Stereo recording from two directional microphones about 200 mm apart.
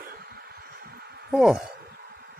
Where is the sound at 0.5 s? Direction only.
55° right (ahead or behind).